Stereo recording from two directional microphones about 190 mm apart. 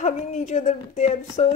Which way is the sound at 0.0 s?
35° left (ahead or behind).